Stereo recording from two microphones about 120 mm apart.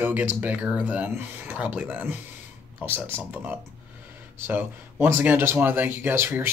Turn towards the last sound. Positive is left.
turn(degrees=-20)  # may be behind; listen again after turning